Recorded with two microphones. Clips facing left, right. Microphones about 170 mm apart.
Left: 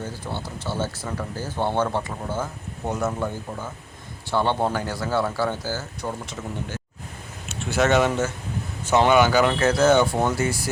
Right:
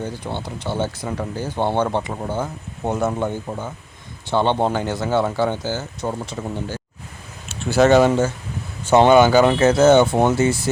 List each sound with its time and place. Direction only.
0.0 s speech: 20° right (ahead or behind)
6.1 s speech: 30° right (ahead or behind)